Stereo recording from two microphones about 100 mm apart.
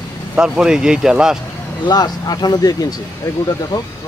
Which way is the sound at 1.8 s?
45° left (ahead or behind).